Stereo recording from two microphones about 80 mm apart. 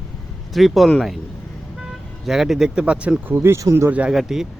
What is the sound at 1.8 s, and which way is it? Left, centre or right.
Vehicle, centre.